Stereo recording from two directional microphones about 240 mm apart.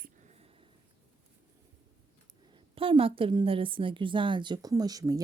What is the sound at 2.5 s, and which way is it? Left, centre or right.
A woman's voice, right.